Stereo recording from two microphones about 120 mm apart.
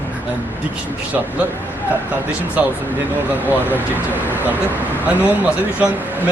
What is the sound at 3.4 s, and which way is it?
A man's voice, 15° right (ahead or behind).